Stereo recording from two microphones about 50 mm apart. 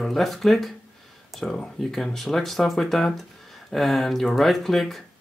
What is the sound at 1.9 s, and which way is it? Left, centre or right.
Speech, centre.